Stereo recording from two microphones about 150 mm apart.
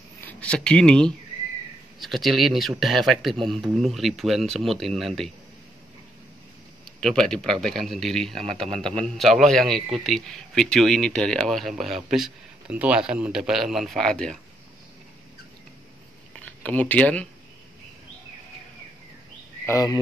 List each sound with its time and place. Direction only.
0.2 s a man's voice: 10° left (ahead or behind)
7.0 s a man's voice: 5° left (ahead or behind)
16.3 s speech: 10° left (ahead or behind)
19.6 s speech: 20° left (ahead or behind)